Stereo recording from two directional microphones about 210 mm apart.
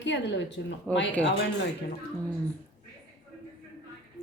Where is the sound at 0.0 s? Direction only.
60° left (ahead or behind).